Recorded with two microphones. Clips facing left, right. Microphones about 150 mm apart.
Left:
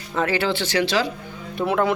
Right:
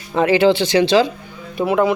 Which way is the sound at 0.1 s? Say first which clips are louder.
Right 8 dB; 20° right (ahead or behind).